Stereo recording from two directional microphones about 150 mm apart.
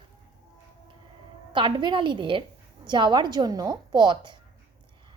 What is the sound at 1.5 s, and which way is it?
A woman's voice, 30° right (ahead or behind).